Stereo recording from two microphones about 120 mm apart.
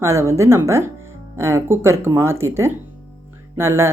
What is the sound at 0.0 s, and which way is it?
Speech, 25° right (ahead or behind).